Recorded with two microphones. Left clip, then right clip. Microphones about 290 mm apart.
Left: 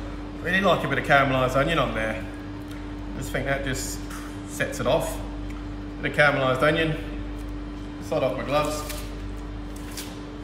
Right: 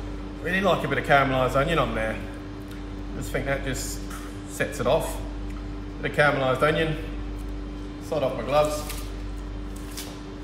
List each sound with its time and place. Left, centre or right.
0.5 s a man's voice: centre
3.3 s a man's voice: centre
6.0 s a man's voice: centre
8.1 s a man's voice: centre